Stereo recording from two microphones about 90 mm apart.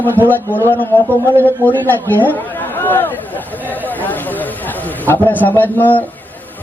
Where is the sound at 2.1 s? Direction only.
20° left (ahead or behind).